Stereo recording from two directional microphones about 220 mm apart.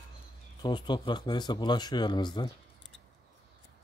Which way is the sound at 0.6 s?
20° left (ahead or behind).